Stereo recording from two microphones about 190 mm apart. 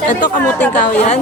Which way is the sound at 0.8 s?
40° left (ahead or behind).